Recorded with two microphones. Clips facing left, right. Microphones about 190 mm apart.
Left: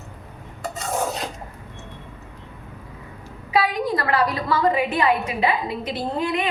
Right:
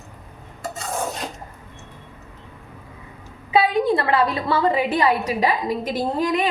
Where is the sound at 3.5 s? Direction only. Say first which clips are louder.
Right 4 dB; 25° right (ahead or behind).